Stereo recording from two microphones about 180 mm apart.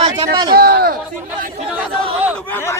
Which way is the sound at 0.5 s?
60° right (ahead or behind).